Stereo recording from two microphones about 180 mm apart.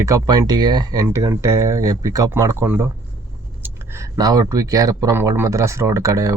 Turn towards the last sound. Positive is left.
turn(degrees=-15)  # may be behind; listen again after turning